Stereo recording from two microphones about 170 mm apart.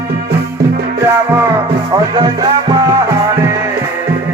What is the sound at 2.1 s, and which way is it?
Music, 25° right (ahead or behind).